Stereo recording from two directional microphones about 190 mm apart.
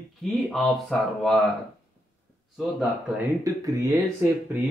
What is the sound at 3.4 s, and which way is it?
Speech, 20° right (ahead or behind).